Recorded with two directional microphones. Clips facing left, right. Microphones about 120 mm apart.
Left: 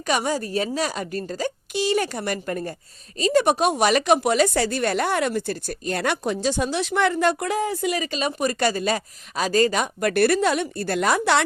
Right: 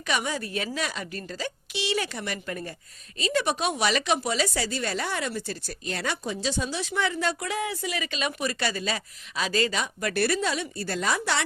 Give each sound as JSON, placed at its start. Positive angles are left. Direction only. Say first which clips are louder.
{"t": 0.0, "sound": "a woman's voice", "louder": "left 6 dB", "side_deg": 40}